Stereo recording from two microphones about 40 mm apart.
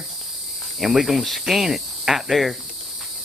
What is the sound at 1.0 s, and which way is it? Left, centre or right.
Speech, centre.